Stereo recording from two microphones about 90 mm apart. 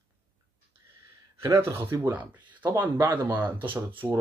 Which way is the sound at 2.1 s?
20° right (ahead or behind).